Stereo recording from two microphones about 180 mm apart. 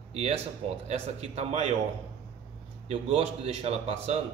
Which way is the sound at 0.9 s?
35° right (ahead or behind).